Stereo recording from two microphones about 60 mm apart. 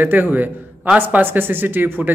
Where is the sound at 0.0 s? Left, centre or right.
Right.